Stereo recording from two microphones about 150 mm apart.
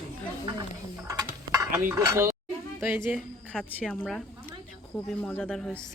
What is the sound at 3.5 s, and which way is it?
Speech, 5° right (ahead or behind).